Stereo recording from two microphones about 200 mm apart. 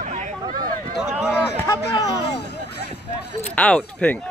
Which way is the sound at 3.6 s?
5° left (ahead or behind).